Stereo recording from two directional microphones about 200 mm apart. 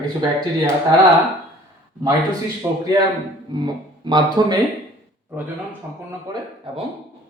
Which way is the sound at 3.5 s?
20° right (ahead or behind).